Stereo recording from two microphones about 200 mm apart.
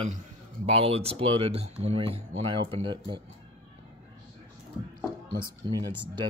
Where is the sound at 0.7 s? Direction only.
30° right (ahead or behind).